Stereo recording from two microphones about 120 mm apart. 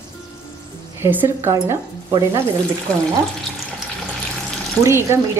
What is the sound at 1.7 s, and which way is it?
Sizzle, 25° right (ahead or behind).